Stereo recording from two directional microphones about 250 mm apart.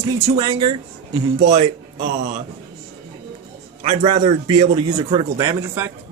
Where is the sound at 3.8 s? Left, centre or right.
Right.